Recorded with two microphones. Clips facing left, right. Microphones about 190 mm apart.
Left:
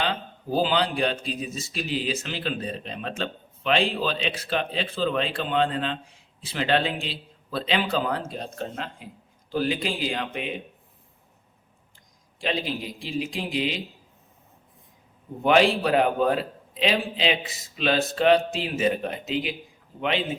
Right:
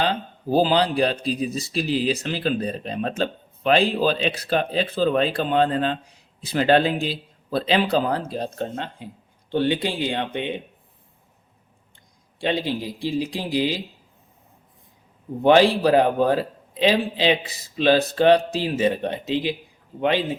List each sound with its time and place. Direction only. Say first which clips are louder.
0.0 s speech: right 4 dB; 40° right (ahead or behind)
12.4 s speech: right 4 dB; 30° right (ahead or behind)
15.4 s speech: right 4 dB; 35° right (ahead or behind)